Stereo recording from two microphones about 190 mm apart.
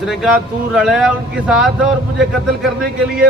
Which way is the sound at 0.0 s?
Centre (ahead or behind).